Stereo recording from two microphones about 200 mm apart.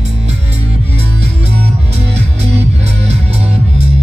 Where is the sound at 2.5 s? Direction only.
30° right (ahead or behind).